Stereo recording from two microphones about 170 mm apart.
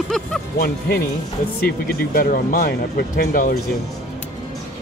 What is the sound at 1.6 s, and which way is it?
Speech, 60° left (ahead or behind).